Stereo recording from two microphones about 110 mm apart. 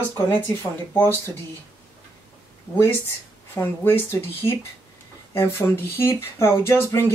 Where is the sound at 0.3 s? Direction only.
20° left (ahead or behind).